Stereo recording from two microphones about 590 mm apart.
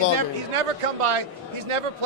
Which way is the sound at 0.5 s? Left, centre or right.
Right.